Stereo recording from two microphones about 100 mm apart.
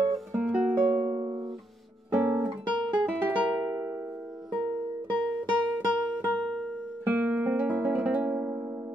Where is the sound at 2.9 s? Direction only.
15° right (ahead or behind).